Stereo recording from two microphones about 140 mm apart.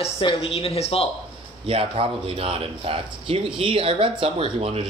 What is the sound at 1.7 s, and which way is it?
Speech, 45° right (ahead or behind).